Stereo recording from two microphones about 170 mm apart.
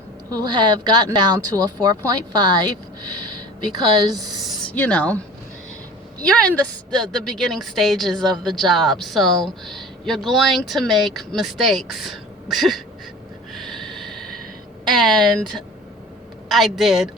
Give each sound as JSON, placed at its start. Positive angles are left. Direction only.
{"t": 0.3, "sound": "speech", "side_deg": -25}
{"t": 3.8, "sound": "speech", "side_deg": -20}
{"t": 4.4, "sound": "a woman's voice", "side_deg": 10}
{"t": 13.5, "sound": "snort", "side_deg": 0}
{"t": 14.9, "sound": "a woman's voice", "side_deg": 5}